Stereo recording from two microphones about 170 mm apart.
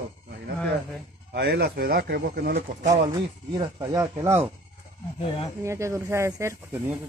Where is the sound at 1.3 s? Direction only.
80° right.